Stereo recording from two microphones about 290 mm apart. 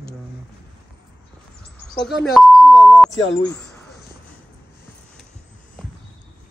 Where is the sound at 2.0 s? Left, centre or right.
Centre.